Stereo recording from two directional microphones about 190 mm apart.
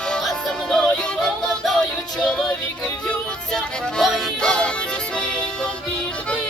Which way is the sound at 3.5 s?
Centre (ahead or behind).